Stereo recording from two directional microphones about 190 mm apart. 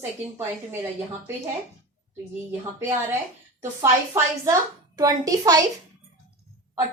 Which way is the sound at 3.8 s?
15° right (ahead or behind).